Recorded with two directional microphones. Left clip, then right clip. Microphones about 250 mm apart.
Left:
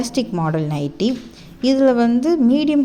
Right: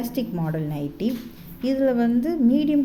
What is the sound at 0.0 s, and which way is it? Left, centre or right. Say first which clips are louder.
Speech: left 7 dB; centre.